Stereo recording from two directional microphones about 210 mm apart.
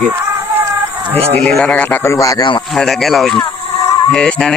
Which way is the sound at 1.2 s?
30° right (ahead or behind).